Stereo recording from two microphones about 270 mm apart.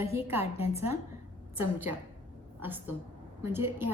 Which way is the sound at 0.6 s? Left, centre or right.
Left.